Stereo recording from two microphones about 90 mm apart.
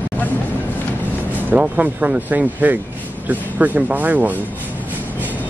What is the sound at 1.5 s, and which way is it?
Speech, 20° right (ahead or behind).